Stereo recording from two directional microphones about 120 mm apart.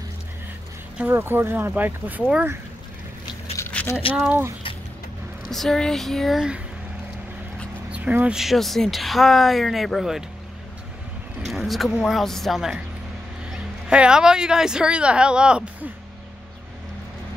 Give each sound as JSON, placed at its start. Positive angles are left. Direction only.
{"t": 0.9, "sound": "speech", "side_deg": -15}
{"t": 3.5, "sound": "a sound", "side_deg": 20}
{"t": 4.3, "sound": "speech", "side_deg": -20}
{"t": 5.5, "sound": "speech", "side_deg": 0}
{"t": 7.9, "sound": "speech", "side_deg": -10}
{"t": 8.4, "sound": "speech", "side_deg": 0}
{"t": 11.4, "sound": "speech", "side_deg": 0}